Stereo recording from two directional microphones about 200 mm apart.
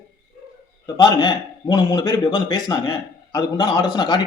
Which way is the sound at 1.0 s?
20° left (ahead or behind).